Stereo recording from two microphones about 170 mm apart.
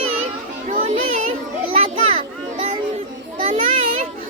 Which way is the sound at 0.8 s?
40° right (ahead or behind).